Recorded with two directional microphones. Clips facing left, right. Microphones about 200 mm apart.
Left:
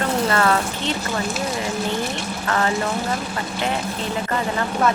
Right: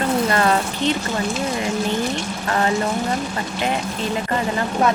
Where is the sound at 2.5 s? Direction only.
25° right (ahead or behind).